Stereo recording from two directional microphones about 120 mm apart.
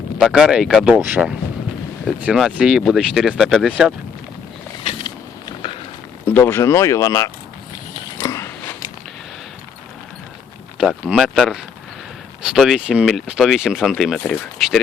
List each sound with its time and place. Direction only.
0.2 s speech: 5° right (ahead or behind)
4.8 s a sound: 55° left (ahead or behind)
6.2 s speech: 20° left (ahead or behind)
8.2 s biting: 25° left (ahead or behind)
10.8 s speech: 5° right (ahead or behind)